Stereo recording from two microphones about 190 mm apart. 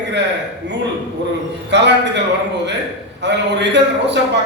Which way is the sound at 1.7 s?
65° right (ahead or behind).